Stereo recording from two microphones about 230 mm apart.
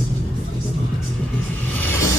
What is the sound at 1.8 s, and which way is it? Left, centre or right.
Vehicle, centre.